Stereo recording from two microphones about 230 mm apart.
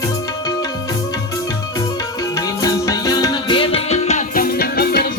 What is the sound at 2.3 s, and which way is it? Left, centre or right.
Music, centre.